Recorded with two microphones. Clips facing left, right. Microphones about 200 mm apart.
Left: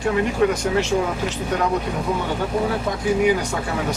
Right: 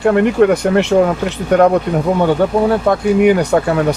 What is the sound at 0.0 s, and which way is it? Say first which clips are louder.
Speech: right 8 dB; 60° right (ahead or behind).